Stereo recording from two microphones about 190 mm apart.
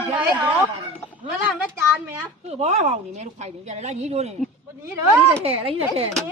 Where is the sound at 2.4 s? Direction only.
35° right (ahead or behind).